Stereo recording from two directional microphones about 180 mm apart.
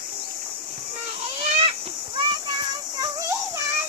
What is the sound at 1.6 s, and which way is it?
Children playing, 30° right (ahead or behind).